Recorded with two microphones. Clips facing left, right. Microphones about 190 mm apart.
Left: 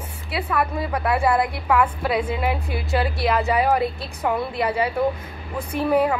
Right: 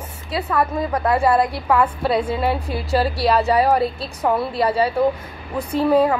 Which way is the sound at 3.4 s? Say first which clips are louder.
Right 3 dB; 30° right (ahead or behind).